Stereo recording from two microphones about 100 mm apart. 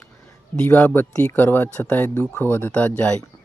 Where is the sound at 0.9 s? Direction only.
20° left (ahead or behind).